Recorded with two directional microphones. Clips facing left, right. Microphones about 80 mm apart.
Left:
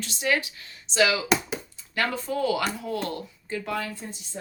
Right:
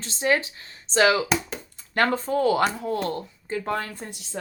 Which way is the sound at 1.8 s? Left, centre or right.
Right.